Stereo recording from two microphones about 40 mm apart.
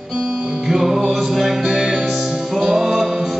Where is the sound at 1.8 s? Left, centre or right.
Right.